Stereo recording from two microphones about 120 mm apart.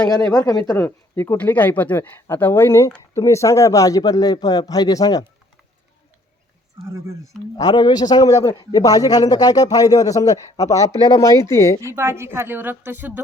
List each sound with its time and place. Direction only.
0.0 s speech: 35° left (ahead or behind)
0.7 s a man's voice: 20° left (ahead or behind)
7.5 s a man's voice: 35° left (ahead or behind)
11.9 s a woman's voice: 20° right (ahead or behind)